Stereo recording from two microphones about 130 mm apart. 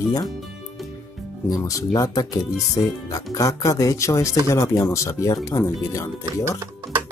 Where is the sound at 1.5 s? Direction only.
25° left (ahead or behind).